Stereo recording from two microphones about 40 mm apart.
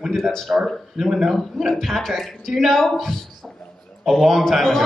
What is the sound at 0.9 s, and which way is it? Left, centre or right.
Speech, centre.